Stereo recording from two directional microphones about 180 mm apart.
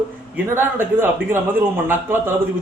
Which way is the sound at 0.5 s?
10° right (ahead or behind).